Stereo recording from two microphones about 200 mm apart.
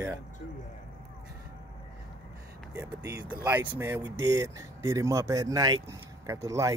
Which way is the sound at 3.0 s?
15° right (ahead or behind).